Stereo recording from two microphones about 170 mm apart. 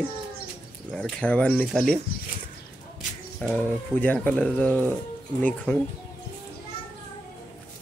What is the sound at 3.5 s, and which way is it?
Speech, 10° left (ahead or behind).